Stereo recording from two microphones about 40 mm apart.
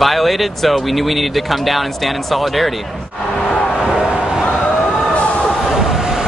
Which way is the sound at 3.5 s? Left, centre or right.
Left.